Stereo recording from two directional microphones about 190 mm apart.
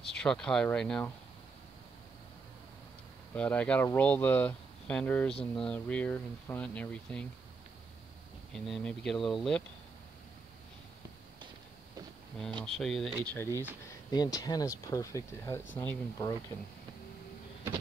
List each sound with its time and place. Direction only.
0.2 s speech: 5° left (ahead or behind)
3.3 s speech: 5° left (ahead or behind)
8.5 s speech: centre (ahead or behind)
12.6 s speech: centre (ahead or behind)
14.1 s speech: 20° left (ahead or behind)